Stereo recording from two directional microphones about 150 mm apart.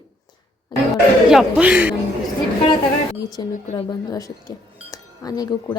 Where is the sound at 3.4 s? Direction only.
30° left (ahead or behind).